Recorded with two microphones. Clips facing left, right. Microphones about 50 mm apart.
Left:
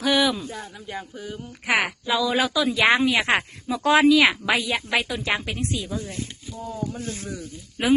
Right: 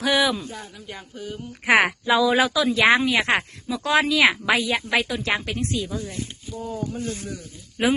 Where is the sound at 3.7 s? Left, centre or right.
Left.